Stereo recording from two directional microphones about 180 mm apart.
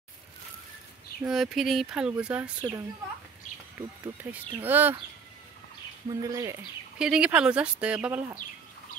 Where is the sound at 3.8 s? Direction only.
10° right (ahead or behind).